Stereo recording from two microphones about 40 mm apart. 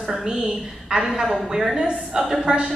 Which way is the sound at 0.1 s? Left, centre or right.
Centre.